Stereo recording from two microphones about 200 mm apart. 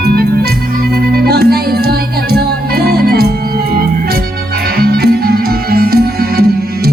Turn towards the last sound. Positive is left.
turn(degrees=-50)  # may be behind; listen again after turning